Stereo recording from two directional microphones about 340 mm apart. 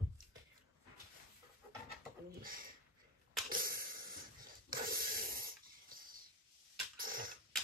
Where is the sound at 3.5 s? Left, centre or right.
Right.